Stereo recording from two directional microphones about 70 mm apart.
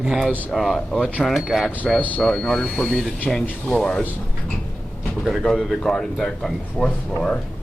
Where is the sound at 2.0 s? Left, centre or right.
Left.